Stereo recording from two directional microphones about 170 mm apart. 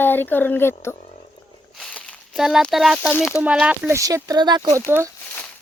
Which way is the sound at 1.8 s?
Centre (ahead or behind).